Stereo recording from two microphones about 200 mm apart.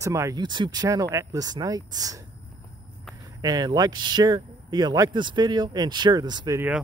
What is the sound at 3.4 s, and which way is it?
Speech, 20° right (ahead or behind).